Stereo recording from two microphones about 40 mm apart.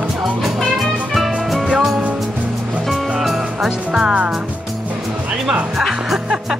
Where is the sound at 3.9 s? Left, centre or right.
Centre.